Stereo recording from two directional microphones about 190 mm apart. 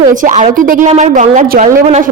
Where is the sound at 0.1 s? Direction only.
40° right (ahead or behind).